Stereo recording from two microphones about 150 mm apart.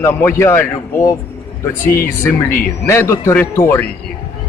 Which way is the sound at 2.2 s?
15° left (ahead or behind).